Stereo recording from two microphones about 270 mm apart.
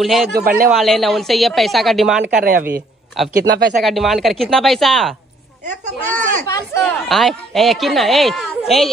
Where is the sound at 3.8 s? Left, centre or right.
Centre.